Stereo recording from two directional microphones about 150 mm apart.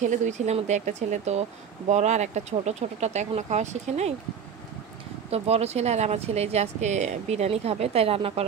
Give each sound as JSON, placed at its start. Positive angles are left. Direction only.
{"t": 0.0, "sound": "speech", "side_deg": -50}
{"t": 5.3, "sound": "speech", "side_deg": -45}